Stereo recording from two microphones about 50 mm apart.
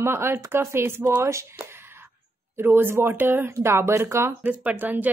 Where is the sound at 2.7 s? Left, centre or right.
Right.